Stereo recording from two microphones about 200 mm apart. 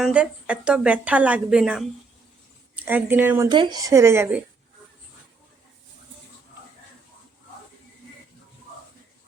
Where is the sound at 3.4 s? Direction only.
25° right (ahead or behind).